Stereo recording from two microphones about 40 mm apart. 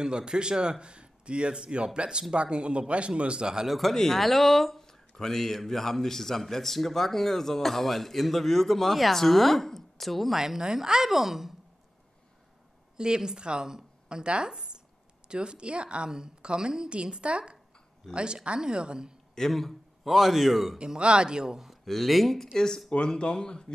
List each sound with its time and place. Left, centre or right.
0.0 s speech: right
3.6 s speech: centre
3.9 s speech: centre
10.3 s a woman's voice: centre
12.9 s speech: centre
14.5 s zipper: centre
15.2 s speech: right
19.3 s a man's voice: centre
20.7 s speech: right
21.8 s speech: centre
22.8 s speech: left